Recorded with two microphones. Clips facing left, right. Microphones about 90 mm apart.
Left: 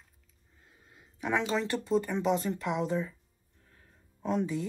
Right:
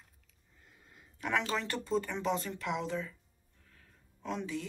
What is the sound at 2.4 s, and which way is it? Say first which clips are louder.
Speech: left 5 dB; 25° left (ahead or behind).